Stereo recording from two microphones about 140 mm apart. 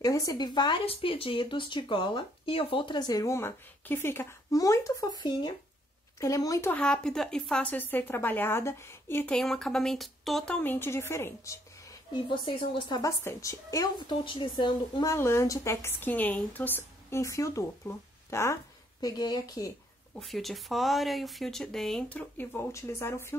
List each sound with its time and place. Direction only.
0.0 s a woman's voice: 25° left (ahead or behind)
6.7 s a woman's voice: 5° left (ahead or behind)
9.3 s a woman's voice: 5° left (ahead or behind); by 11.6 s 20° left (ahead or behind)
12.1 s speech: 35° left (ahead or behind)
13.2 s a woman's voice: 20° left (ahead or behind)
13.9 s speech: 35° left (ahead or behind)
15.0 s a woman's voice: 20° left (ahead or behind)
20.2 s speech: centre (ahead or behind); by 23.3 s 15° left (ahead or behind)